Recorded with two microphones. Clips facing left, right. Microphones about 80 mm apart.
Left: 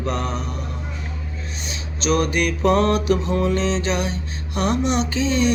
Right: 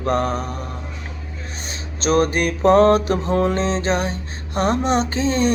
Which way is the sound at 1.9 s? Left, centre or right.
Right.